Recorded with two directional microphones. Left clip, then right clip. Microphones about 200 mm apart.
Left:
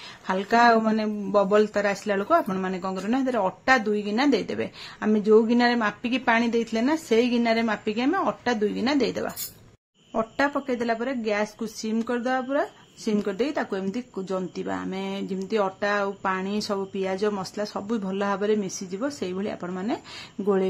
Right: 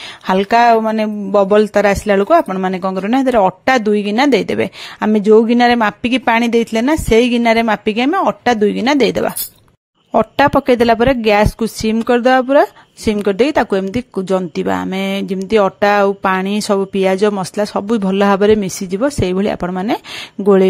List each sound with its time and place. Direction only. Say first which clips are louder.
0.3 s speech: right 9 dB; 45° right (ahead or behind)